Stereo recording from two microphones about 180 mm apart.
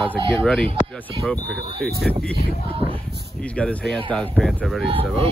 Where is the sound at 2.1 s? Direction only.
5° left (ahead or behind).